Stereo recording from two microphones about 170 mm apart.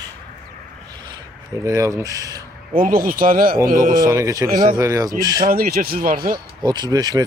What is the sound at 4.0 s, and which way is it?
Speech, 20° right (ahead or behind).